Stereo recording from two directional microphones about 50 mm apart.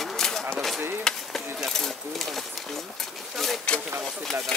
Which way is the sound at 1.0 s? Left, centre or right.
Centre.